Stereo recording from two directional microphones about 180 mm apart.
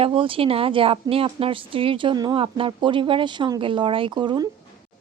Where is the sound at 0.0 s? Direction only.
30° right (ahead or behind).